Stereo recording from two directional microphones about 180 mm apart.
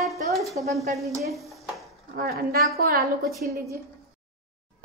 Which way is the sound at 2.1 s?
55° right (ahead or behind).